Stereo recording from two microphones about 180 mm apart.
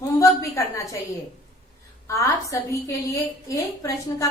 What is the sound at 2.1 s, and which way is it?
A woman's voice, 15° left (ahead or behind).